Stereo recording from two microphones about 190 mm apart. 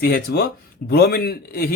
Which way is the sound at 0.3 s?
60° left (ahead or behind).